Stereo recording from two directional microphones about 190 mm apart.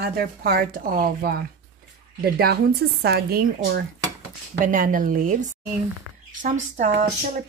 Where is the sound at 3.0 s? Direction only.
55° right (ahead or behind); by 7.0 s 40° right (ahead or behind).